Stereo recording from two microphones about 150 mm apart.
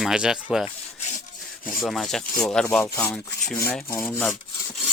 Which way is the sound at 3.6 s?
15° left (ahead or behind).